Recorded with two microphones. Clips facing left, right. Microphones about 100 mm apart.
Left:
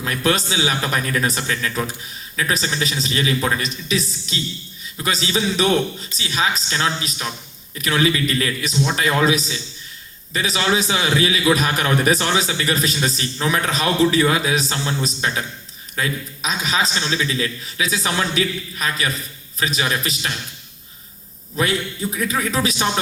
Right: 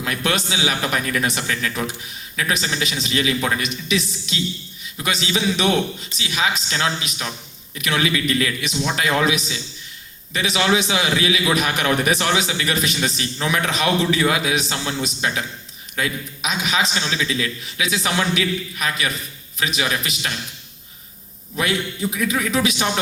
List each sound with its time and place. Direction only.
0.0 s a man's voice: 35° left (ahead or behind)
21.6 s a man's voice: 35° left (ahead or behind)